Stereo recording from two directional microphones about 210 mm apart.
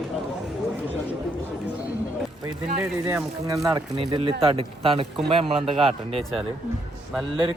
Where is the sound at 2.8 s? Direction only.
10° right (ahead or behind); by 5.8 s 25° right (ahead or behind).